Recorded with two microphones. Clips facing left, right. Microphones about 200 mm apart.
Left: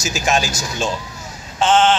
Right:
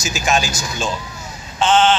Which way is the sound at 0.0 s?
40° left (ahead or behind).